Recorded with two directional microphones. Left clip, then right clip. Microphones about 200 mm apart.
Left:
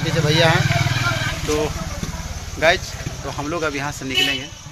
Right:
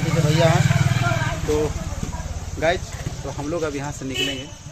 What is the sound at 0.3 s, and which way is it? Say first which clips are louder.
Speech: left 3 dB; centre (ahead or behind).